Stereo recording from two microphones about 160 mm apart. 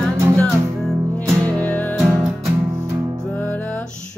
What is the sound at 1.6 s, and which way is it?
Music, 10° left (ahead or behind).